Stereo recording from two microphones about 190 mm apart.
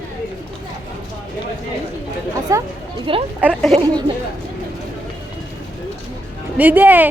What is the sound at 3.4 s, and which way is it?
Speech, centre (ahead or behind).